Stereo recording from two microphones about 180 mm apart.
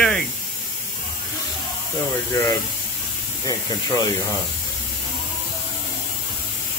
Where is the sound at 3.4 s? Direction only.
20° left (ahead or behind).